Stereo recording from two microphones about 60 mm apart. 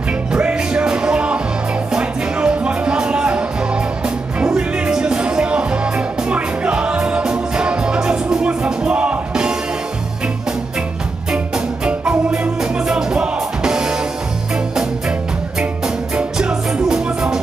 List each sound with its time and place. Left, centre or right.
0.3 s music: centre
11.3 s music: centre
16.2 s music: centre